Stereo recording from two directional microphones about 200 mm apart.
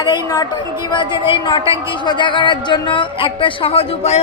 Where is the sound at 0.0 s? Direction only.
20° left (ahead or behind).